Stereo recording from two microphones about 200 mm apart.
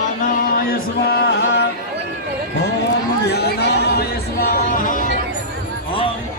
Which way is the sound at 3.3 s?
55° left (ahead or behind).